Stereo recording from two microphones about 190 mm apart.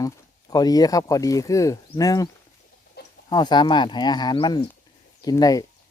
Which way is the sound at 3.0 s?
60° left (ahead or behind).